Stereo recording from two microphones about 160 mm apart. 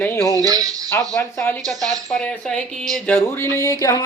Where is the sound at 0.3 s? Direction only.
20° right (ahead or behind).